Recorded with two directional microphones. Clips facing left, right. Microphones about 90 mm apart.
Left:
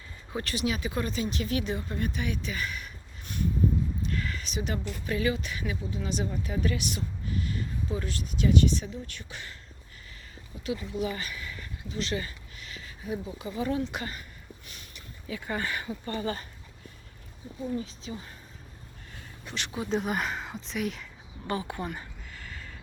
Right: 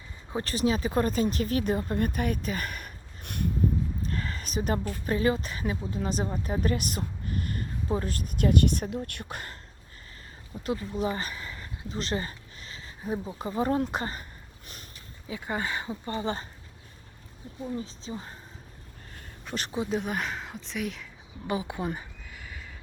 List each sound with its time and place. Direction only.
0.3 s speech: 35° right (ahead or behind); by 3.5 s 55° right (ahead or behind)
4.0 s a sound: 35° right (ahead or behind)
5.0 s speech: 40° right (ahead or behind)
10.7 s speech: 40° right (ahead or behind)
15.3 s speech: 20° right (ahead or behind)
17.7 s speech: 35° right (ahead or behind)
19.5 s speech: 40° right (ahead or behind)
19.9 s speech: centre (ahead or behind)
21.4 s speech: 10° right (ahead or behind)
21.9 s a sound: 10° right (ahead or behind)